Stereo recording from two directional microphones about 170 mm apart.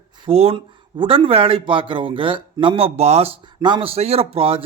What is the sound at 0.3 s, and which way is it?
Speech, 35° right (ahead or behind).